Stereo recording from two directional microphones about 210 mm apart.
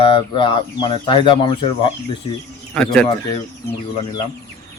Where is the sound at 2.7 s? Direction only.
5° left (ahead or behind).